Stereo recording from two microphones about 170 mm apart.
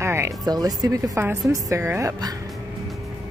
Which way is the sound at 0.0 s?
15° right (ahead or behind).